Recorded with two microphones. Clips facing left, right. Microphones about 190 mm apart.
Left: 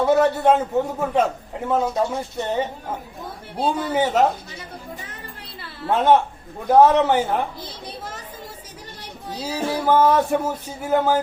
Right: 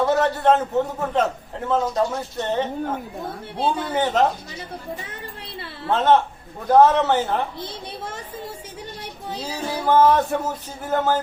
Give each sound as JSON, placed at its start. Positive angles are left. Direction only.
{"t": 0.0, "sound": "a man's voice", "side_deg": 10}
{"t": 3.8, "sound": "a man's voice", "side_deg": 10}
{"t": 5.9, "sound": "a man's voice", "side_deg": 10}
{"t": 7.6, "sound": "a child's voice", "side_deg": -25}
{"t": 9.4, "sound": "a man's voice", "side_deg": 10}